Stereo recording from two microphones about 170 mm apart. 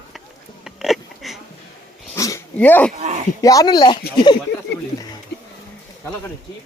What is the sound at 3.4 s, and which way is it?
Speech, 20° left (ahead or behind).